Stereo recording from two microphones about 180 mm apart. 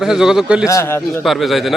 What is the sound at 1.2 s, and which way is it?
Speech, centre (ahead or behind).